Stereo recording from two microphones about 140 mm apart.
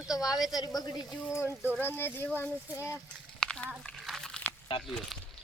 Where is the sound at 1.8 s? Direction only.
15° left (ahead or behind).